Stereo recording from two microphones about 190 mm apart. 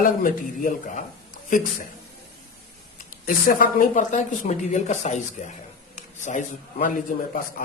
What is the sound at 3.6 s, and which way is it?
A man's voice, 45° left (ahead or behind).